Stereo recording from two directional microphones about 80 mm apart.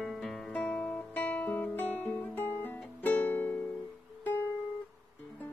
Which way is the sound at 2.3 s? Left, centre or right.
Right.